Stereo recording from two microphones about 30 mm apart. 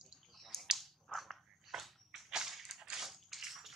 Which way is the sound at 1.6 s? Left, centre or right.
Centre.